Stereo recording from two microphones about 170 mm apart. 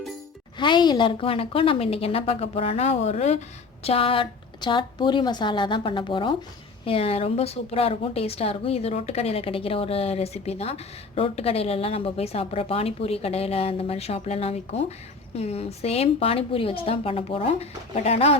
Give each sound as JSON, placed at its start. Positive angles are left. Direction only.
{"t": 0.6, "sound": "a woman's voice", "side_deg": 25}